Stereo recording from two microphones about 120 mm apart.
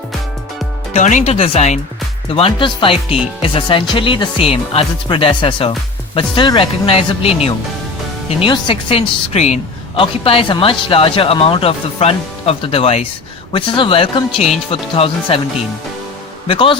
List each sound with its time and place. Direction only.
0.9 s speech: 75° left (ahead or behind)
2.3 s speech: 50° left (ahead or behind)
16.5 s speech: 45° left (ahead or behind)